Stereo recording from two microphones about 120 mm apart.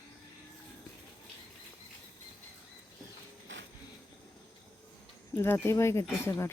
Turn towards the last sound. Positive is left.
turn(degrees=20)  # may be behind; listen again after turning